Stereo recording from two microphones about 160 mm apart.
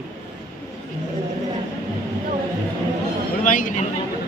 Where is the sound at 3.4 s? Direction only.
55° left (ahead or behind).